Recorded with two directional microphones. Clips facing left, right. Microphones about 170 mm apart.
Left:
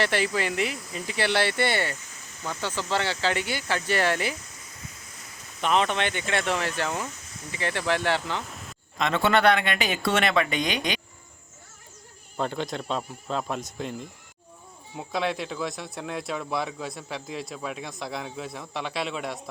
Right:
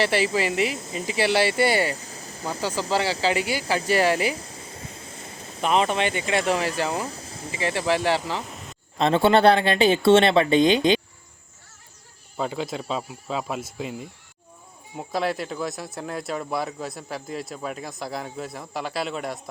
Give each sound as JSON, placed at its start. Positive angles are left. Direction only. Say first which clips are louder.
{"t": 0.0, "sound": "speech", "louder": "right 3 dB", "side_deg": -5}
{"t": 0.8, "sound": "speech", "louder": "right 4 dB", "side_deg": -25}
{"t": 1.1, "sound": "speech", "louder": "right 4 dB", "side_deg": -5}
{"t": 2.0, "sound": "a sound", "louder": "right 6 dB", "side_deg": -35}
{"t": 2.9, "sound": "speech", "louder": "right 3 dB", "side_deg": -10}
{"t": 4.4, "sound": "a sound", "louder": "right 8 dB", "side_deg": -30}
{"t": 6.0, "sound": "speech", "louder": "right 4 dB", "side_deg": -5}
{"t": 6.8, "sound": "speech", "louder": "right 3 dB", "side_deg": -35}
{"t": 7.6, "sound": "speech", "louder": "right 3 dB", "side_deg": -5}
{"t": 9.0, "sound": "speech", "louder": "right 5 dB", "side_deg": -30}
{"t": 12.4, "sound": "speech", "louder": "right 1 dB", "side_deg": -5}